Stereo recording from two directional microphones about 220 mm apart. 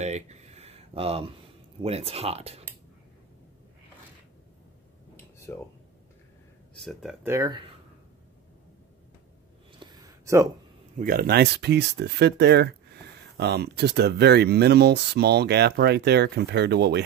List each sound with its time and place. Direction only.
0.0 s speech: 30° right (ahead or behind)
5.1 s a sound: 10° left (ahead or behind)
6.8 s speech: centre (ahead or behind)
7.3 s speech: 20° right (ahead or behind)
9.8 s a sound: 20° right (ahead or behind)
11.0 s speech: 40° right (ahead or behind)